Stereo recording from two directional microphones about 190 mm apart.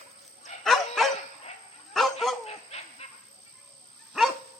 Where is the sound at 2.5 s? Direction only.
35° left (ahead or behind).